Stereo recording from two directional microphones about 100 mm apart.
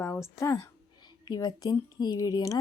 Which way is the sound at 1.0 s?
45° left (ahead or behind).